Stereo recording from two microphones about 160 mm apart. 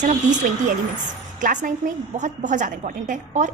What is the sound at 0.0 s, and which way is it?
A woman's voice, 50° right (ahead or behind).